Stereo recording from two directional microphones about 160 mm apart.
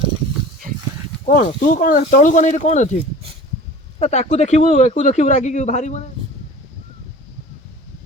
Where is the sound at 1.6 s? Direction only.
55° left (ahead or behind).